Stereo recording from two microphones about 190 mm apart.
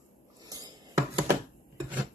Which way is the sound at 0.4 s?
20° right (ahead or behind).